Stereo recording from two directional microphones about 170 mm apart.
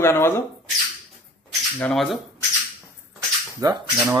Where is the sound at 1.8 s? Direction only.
5° left (ahead or behind).